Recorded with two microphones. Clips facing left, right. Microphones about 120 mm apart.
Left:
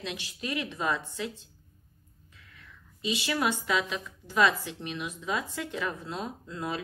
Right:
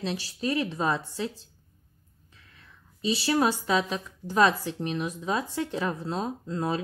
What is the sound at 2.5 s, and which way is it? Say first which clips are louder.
A woman's voice: left 2 dB; 35° right (ahead or behind).